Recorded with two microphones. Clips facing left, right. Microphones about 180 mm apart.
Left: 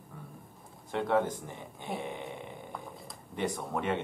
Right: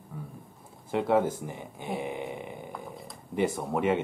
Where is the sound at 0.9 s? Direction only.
5° right (ahead or behind).